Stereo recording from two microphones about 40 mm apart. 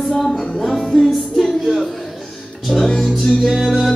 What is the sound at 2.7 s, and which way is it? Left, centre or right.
Music, centre.